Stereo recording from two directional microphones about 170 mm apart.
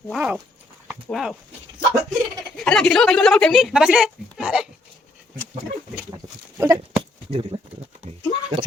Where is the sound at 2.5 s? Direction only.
5° left (ahead or behind).